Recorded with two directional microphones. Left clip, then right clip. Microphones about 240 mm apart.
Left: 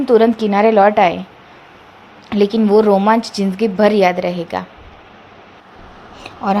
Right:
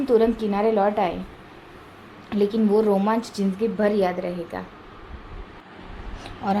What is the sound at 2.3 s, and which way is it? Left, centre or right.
A woman's voice, centre.